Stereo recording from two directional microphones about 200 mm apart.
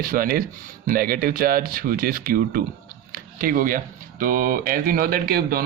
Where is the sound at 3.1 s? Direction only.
45° right (ahead or behind).